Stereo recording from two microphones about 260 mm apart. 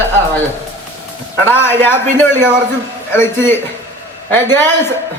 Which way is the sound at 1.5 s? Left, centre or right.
Centre.